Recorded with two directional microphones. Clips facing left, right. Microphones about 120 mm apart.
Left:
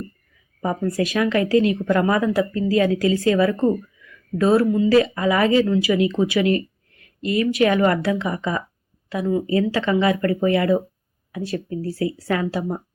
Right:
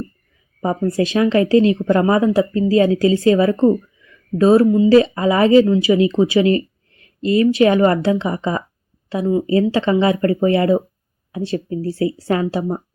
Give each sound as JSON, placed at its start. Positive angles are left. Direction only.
{"t": 0.6, "sound": "a woman's voice", "side_deg": -25}